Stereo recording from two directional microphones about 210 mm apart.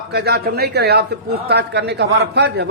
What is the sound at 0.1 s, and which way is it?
A man's voice, 50° right (ahead or behind).